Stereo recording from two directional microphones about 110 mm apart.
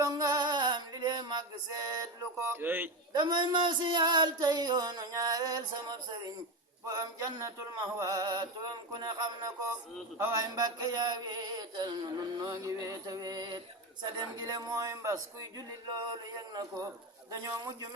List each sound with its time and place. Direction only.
0.0 s male singing: 35° right (ahead or behind)
2.5 s a man's voice: 20° right (ahead or behind)
3.1 s speech: 40° right (ahead or behind)
17.4 s speech: 35° right (ahead or behind)